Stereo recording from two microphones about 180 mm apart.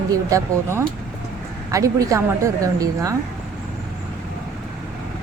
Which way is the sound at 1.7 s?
20° right (ahead or behind).